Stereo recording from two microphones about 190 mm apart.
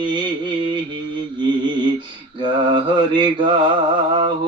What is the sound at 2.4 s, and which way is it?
Mantra, 25° right (ahead or behind).